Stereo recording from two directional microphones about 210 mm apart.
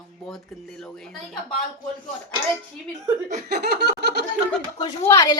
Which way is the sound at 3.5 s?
50° right (ahead or behind).